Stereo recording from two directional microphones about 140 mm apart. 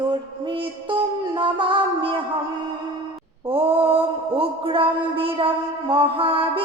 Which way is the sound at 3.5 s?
40° right (ahead or behind).